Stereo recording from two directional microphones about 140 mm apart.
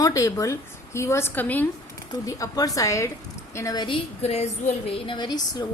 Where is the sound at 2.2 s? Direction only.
25° left (ahead or behind).